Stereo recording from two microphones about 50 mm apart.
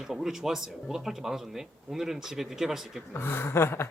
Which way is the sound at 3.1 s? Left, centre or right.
Left.